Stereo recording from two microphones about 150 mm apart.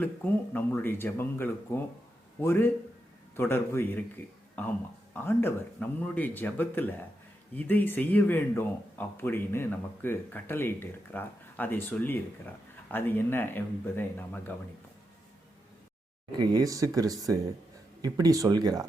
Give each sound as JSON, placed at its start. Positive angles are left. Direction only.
{"t": 0.5, "sound": "speech", "side_deg": 15}
{"t": 5.1, "sound": "speech", "side_deg": 15}
{"t": 16.4, "sound": "speech", "side_deg": -25}